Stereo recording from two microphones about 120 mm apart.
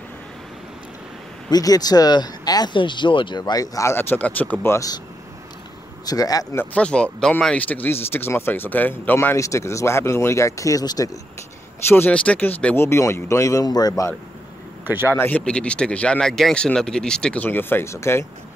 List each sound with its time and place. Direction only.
1.5 s speech: 30° left (ahead or behind); by 4.7 s 15° left (ahead or behind)
4.7 s speech: 30° left (ahead or behind)
6.0 s speech: 30° left (ahead or behind)
6.6 s speech: 10° left (ahead or behind); by 11.1 s 30° left (ahead or behind)
11.9 s speech: 15° left (ahead or behind); by 14.0 s 35° left (ahead or behind)
14.9 s speech: 15° right (ahead or behind)
15.1 s speech: 15° left (ahead or behind)